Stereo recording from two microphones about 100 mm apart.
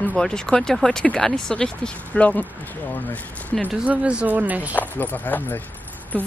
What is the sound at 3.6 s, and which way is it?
Speech, 15° right (ahead or behind).